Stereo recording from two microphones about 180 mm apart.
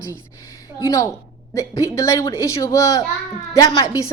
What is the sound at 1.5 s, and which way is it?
A woman's voice, 15° left (ahead or behind).